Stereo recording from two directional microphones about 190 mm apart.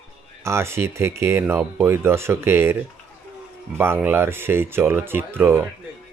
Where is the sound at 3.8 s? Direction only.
10° right (ahead or behind).